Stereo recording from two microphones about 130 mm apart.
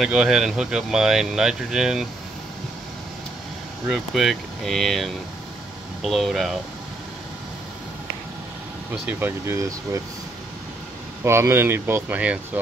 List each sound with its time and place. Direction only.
0.0 s speech: 5° right (ahead or behind)
3.8 s speech: centre (ahead or behind)
9.0 s speech: 20° right (ahead or behind)
11.2 s speech: 20° right (ahead or behind)